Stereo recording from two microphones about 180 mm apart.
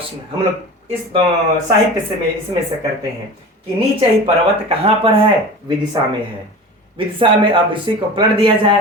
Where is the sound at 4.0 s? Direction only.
30° right (ahead or behind).